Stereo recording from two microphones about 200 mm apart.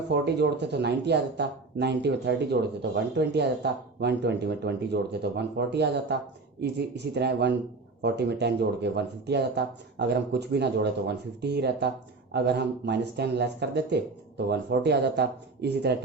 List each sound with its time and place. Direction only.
0.1 s speech: 55° right (ahead or behind)